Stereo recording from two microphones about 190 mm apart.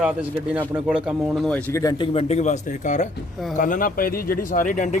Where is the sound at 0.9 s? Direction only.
5° right (ahead or behind).